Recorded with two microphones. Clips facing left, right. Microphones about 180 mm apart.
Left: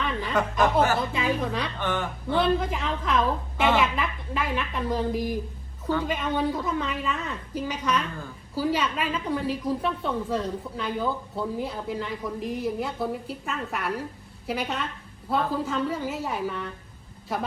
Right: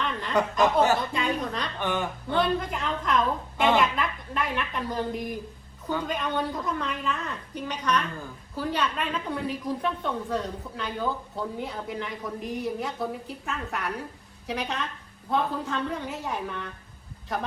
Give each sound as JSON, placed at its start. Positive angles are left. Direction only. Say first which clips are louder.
{"t": 0.0, "sound": "chuckle", "louder": "left 2 dB", "side_deg": 5}
{"t": 0.6, "sound": "speech", "louder": "even", "side_deg": -20}
{"t": 1.1, "sound": "a woman's voice", "louder": "left 2 dB", "side_deg": 5}
{"t": 1.8, "sound": "speech", "louder": "right 2 dB", "side_deg": -15}
{"t": 2.3, "sound": "a woman's voice", "louder": "left 2 dB", "side_deg": 0}